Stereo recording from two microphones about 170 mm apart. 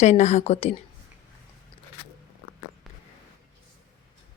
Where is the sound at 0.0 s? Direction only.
40° left (ahead or behind).